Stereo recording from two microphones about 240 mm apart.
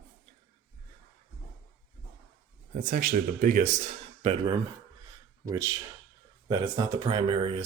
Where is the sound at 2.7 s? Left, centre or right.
Right.